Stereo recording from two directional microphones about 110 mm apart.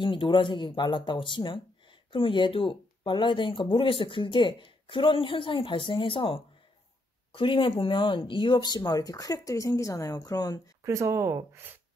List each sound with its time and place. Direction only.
0.0 s speech: 45° left (ahead or behind)
10.8 s speech: 25° right (ahead or behind)